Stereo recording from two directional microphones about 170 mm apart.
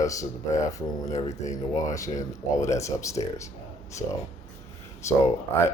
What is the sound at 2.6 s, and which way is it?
Speech, 15° left (ahead or behind).